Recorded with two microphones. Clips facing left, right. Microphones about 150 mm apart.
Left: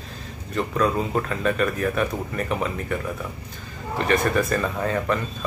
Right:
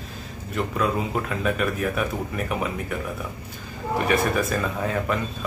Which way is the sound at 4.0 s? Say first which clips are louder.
Left 1 dB; 5° right (ahead or behind).